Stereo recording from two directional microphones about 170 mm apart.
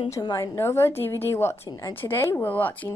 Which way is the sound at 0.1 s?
20° left (ahead or behind).